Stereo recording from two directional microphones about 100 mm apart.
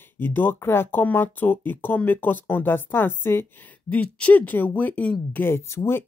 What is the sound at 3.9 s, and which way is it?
Speech, 15° left (ahead or behind).